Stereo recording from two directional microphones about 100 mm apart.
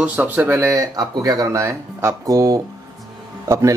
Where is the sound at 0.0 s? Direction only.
15° right (ahead or behind).